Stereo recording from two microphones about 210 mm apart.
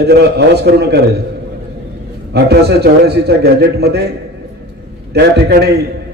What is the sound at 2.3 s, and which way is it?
A man's voice, 50° right (ahead or behind).